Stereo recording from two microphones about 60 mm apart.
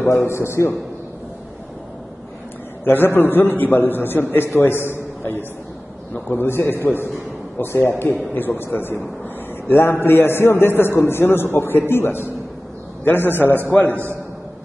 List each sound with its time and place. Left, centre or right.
0.0 s a man's voice: left
2.8 s a man's voice: left
6.1 s a man's voice: left
13.8 s a man's voice: right